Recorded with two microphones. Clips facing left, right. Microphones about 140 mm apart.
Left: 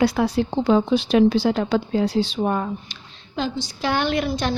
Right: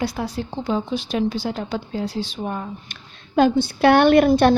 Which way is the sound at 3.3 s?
55° right (ahead or behind).